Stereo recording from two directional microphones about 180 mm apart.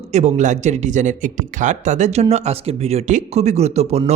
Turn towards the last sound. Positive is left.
turn(degrees=-35)  # may be behind; listen again after turning